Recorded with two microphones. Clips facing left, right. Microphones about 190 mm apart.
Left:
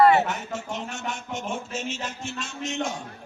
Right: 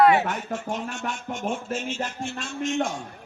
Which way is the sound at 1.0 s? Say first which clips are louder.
Right 2 dB; 45° right (ahead or behind).